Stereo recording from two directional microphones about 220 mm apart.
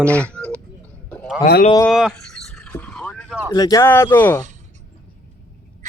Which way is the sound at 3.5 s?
15° left (ahead or behind).